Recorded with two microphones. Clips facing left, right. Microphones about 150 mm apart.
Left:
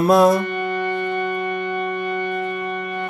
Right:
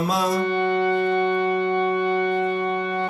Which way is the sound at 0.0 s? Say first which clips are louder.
Left 9 dB; 55° left (ahead or behind).